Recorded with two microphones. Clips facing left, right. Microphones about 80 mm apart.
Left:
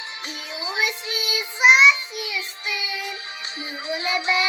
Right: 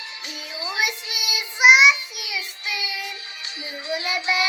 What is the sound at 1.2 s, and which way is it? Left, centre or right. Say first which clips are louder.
Child singing: right 1 dB; centre.